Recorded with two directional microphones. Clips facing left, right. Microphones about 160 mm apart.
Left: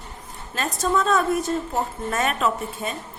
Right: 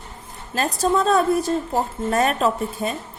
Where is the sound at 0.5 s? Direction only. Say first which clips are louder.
Right 3 dB; 35° right (ahead or behind).